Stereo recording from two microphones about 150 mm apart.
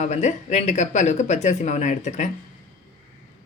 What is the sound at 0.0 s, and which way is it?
Speech, 50° left (ahead or behind).